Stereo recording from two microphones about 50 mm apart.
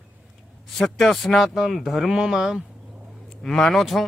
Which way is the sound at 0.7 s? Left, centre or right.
Centre.